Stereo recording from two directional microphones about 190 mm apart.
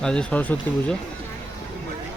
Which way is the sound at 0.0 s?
5° left (ahead or behind).